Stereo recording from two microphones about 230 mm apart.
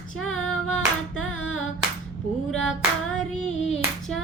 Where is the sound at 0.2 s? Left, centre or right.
Centre.